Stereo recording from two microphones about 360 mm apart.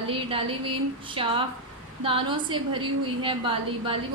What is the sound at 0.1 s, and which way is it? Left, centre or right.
A woman's voice, centre.